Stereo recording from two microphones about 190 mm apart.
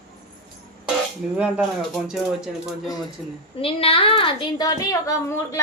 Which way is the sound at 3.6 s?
30° left (ahead or behind).